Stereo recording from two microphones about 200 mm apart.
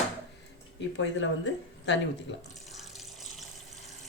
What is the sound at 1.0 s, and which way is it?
Speech, 65° left (ahead or behind).